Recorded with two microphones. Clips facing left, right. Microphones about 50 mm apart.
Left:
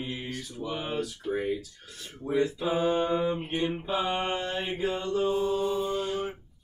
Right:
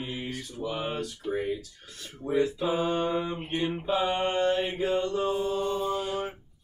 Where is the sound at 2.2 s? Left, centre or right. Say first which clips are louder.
Right 1 dB; centre.